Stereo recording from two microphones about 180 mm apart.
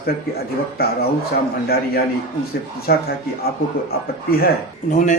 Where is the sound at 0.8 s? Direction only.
60° left (ahead or behind).